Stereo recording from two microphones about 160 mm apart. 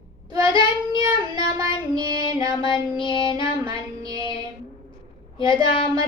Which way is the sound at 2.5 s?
30° left (ahead or behind).